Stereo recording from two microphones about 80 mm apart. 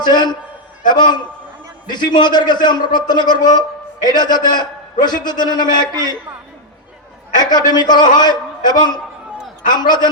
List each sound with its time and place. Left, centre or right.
0.0 s a man's voice: left
7.3 s a man's voice: left